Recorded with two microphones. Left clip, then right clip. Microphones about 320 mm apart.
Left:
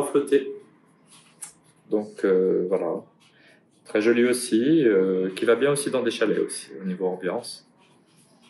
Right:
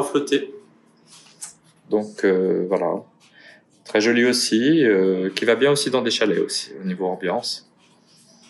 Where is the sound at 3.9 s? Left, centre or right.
Right.